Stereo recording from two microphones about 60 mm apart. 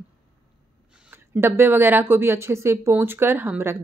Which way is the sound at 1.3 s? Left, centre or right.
Right.